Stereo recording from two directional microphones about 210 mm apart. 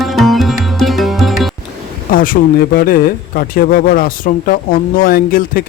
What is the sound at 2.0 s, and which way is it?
Speech, 40° left (ahead or behind).